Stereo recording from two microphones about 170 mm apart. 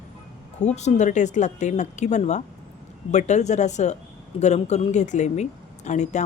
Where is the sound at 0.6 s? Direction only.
40° left (ahead or behind).